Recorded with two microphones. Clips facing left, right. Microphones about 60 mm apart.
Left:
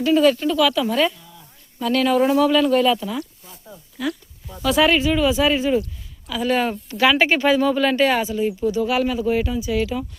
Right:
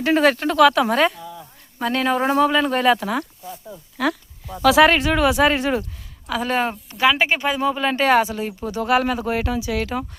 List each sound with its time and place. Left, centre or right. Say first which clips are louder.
0.0 s speech: left 1 dB; right
1.8 s speech: left 2 dB; right
2.6 s speech: even; right
3.9 s speech: right 4 dB; right
4.9 s speech: even; right
6.2 s speech: left 1 dB; right
6.9 s speech: left 1 dB; centre
8.0 s speech: right 2 dB; right
9.8 s speech: left 1 dB; right